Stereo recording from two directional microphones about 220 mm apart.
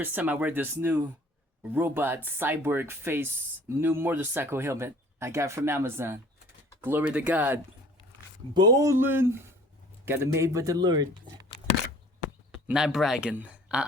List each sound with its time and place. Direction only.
0.0 s speech: 10° right (ahead or behind)
12.5 s speech: 5° right (ahead or behind)